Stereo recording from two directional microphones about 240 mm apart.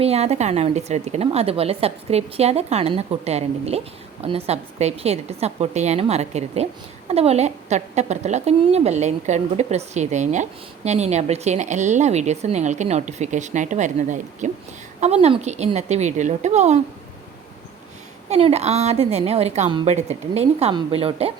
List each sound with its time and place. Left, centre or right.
0.0 s a woman's voice: right
18.3 s a woman's voice: right